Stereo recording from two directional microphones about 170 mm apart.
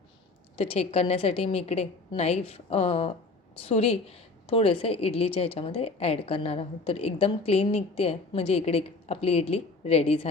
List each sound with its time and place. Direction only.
0.5 s a woman's voice: 35° left (ahead or behind)